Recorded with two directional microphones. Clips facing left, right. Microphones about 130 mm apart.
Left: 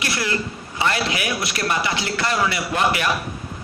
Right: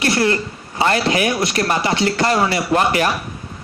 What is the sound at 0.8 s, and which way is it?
A man's voice, 40° right (ahead or behind).